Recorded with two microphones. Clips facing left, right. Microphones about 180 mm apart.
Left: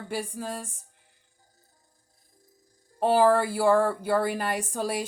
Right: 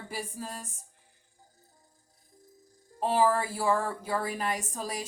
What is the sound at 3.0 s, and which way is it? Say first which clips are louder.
A woman's voice: left 5 dB; 70° left (ahead or behind).